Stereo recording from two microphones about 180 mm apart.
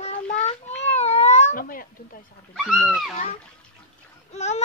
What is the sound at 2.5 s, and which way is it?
Speech, centre (ahead or behind).